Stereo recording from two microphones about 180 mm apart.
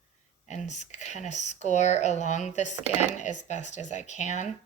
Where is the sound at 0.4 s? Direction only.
40° left (ahead or behind).